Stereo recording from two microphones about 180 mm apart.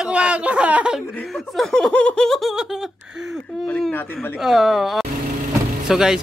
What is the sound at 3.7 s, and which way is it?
Speech, 10° left (ahead or behind).